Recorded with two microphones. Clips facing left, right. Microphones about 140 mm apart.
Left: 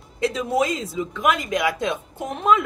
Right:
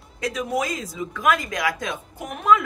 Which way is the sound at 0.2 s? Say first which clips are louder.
Left 4 dB; 25° left (ahead or behind).